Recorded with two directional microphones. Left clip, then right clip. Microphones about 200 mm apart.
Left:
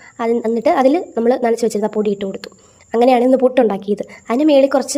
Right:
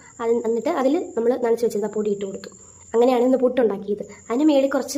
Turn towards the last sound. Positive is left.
turn(degrees=30)  # may be behind; listen again after turning